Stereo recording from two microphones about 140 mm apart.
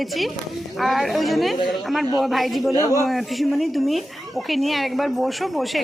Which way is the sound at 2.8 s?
25° left (ahead or behind).